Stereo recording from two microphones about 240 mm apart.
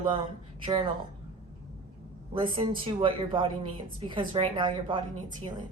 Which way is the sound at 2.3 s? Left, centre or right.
Right.